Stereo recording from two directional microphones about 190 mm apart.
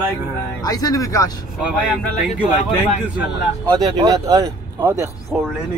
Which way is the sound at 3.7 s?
20° right (ahead or behind).